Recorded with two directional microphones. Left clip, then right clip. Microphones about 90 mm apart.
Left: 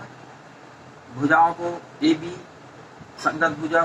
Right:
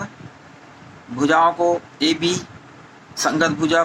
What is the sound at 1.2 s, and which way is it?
Speech, 30° right (ahead or behind).